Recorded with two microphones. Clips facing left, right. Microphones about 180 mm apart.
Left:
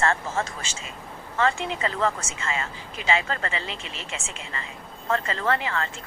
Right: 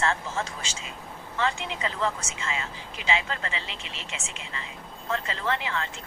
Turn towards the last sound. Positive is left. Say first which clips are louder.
# left 4 dB
turn(degrees=45)  # may be behind; listen again after turning